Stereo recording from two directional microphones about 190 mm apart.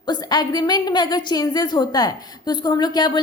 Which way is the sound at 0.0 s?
20° left (ahead or behind).